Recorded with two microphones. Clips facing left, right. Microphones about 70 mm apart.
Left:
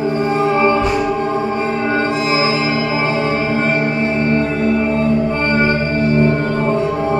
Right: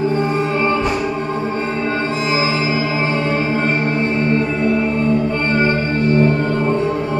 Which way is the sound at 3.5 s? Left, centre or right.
Centre.